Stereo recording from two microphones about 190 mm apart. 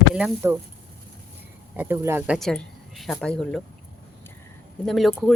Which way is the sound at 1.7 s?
10° right (ahead or behind).